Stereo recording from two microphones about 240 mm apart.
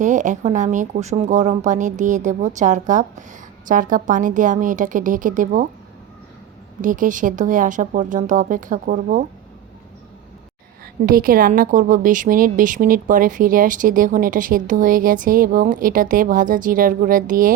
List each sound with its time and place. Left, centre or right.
0.0 s a woman's voice: right
6.8 s a woman's voice: right
11.0 s a woman's voice: right